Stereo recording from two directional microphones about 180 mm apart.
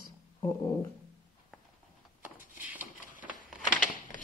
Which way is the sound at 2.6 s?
10° right (ahead or behind).